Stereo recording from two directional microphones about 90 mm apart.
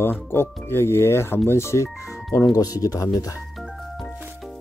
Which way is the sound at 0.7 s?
30° left (ahead or behind).